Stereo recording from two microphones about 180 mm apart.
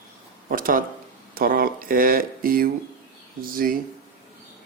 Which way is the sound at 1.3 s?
55° right (ahead or behind).